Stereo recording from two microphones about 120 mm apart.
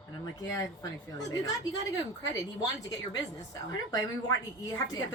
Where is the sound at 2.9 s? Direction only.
30° left (ahead or behind).